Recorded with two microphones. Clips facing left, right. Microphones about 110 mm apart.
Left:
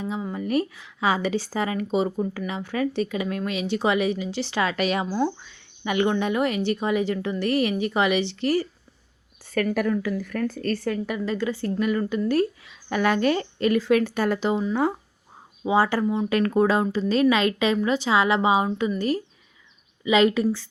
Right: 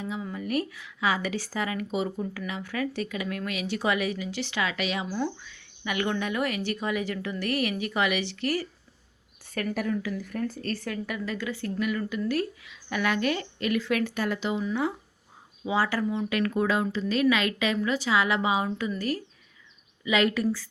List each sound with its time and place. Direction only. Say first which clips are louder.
0.0 s speech: left 4 dB; 30° left (ahead or behind)
5.1 s speech: left 5 dB; 30° left (ahead or behind)
9.7 s a woman's voice: left 5 dB; 55° left (ahead or behind)
11.0 s speech: left 6 dB; 30° left (ahead or behind)
15.6 s speech: left 5 dB; 25° left (ahead or behind)